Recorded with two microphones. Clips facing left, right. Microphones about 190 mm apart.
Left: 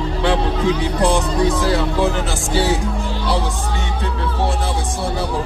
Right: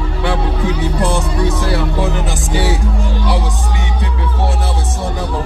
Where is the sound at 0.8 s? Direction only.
15° left (ahead or behind).